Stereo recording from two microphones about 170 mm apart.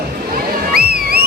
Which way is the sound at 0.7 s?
65° right (ahead or behind).